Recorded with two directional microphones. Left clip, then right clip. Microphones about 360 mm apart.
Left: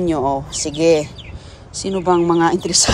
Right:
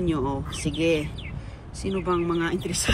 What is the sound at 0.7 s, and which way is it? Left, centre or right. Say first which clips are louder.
Speech: left 9 dB; left.